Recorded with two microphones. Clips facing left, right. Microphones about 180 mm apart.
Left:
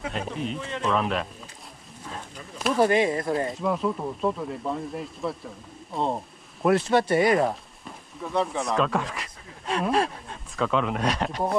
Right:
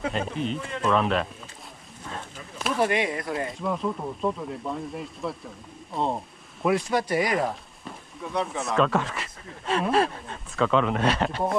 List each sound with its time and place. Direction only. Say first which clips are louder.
0.1 s speech: right 2 dB; 5° left (ahead or behind)
2.0 s a sound: right 1 dB; 5° left (ahead or behind)
2.8 s speech: left 4 dB; 30° left (ahead or behind)
3.6 s speech: left 2 dB; centre (ahead or behind)
6.9 s speech: left 4 dB; 30° left (ahead or behind)
8.2 s speech: left 2 dB; centre (ahead or behind)